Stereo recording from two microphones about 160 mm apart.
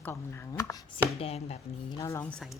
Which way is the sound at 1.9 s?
20° left (ahead or behind).